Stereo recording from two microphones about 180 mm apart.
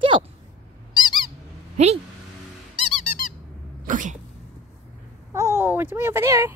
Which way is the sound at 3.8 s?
45° right (ahead or behind).